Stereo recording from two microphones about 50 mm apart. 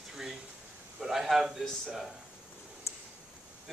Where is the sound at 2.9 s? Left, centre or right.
Left.